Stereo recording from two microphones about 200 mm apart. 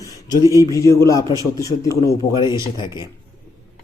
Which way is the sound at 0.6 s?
15° left (ahead or behind).